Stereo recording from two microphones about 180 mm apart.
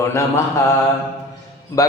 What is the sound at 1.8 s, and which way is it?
Speech, 20° left (ahead or behind).